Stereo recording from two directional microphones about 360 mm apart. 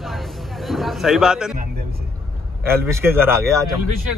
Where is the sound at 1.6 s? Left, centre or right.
Right.